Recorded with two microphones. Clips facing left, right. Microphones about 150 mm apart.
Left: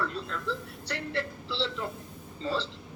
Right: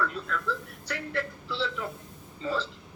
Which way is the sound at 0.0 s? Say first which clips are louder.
Right 2 dB; 30° left (ahead or behind).